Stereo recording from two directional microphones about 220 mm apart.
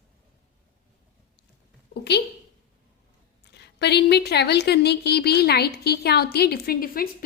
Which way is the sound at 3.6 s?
50° left (ahead or behind).